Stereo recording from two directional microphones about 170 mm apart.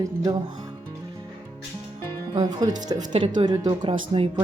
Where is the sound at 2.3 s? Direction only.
25° right (ahead or behind).